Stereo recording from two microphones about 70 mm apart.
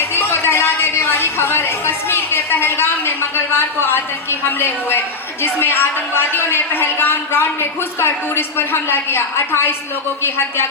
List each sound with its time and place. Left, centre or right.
0.0 s a woman's voice: left